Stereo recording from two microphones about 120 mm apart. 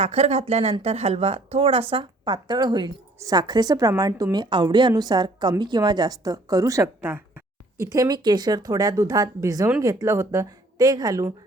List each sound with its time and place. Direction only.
0.0 s a woman's voice: 60° right (ahead or behind); by 7.9 s 20° right (ahead or behind)
7.9 s a woman's voice: 30° right (ahead or behind)